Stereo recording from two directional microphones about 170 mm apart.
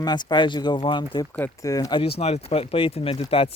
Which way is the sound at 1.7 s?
20° left (ahead or behind).